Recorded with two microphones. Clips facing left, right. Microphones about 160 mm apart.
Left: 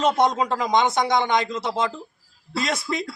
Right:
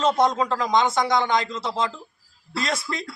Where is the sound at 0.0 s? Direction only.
15° left (ahead or behind).